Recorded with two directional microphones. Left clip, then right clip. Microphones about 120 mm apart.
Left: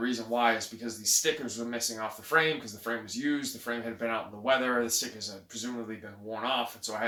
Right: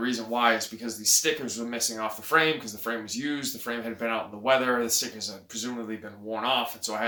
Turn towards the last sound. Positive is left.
turn(degrees=-30)  # may be behind; listen again after turning